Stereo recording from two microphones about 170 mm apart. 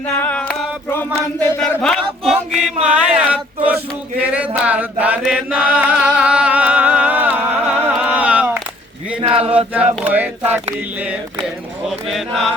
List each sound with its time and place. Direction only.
0.2 s a sound: 10° left (ahead or behind)
2.8 s a sound: 5° right (ahead or behind)
3.7 s male singing: 10° right (ahead or behind)
4.6 s chant: 10° right (ahead or behind)
9.2 s chant: 35° right (ahead or behind)
10.1 s speech: 10° right (ahead or behind)
10.9 s mantra: 5° right (ahead or behind)